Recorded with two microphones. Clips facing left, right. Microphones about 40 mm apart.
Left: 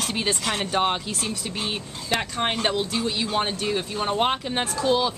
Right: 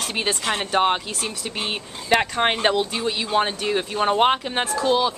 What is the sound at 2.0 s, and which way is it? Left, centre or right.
Speech, right.